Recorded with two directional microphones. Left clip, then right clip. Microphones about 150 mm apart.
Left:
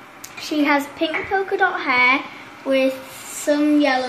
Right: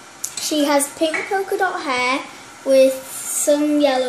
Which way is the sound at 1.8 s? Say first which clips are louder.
Left 4 dB; 15° right (ahead or behind).